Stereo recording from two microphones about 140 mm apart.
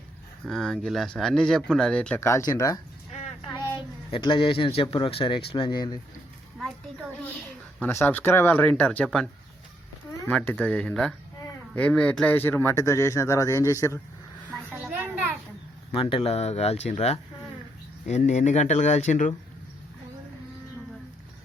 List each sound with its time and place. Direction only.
0.4 s speech: 5° left (ahead or behind)
2.5 s speech: 25° left (ahead or behind)
4.1 s speech: 40° left (ahead or behind)
7.8 s speech: 15° left (ahead or behind)
14.7 s a sound: 10° right (ahead or behind)
15.9 s speech: 40° left (ahead or behind); by 19.3 s 60° left (ahead or behind)